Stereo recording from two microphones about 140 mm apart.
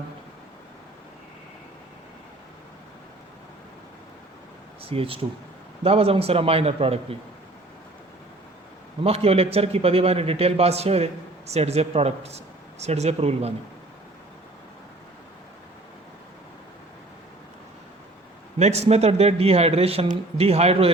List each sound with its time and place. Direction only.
4.8 s a man's voice: 40° right (ahead or behind)
9.0 s a man's voice: 45° right (ahead or behind)
18.6 s a man's voice: 50° right (ahead or behind)